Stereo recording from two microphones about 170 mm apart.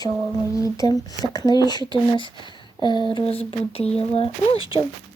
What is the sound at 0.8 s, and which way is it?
Speech, 20° left (ahead or behind).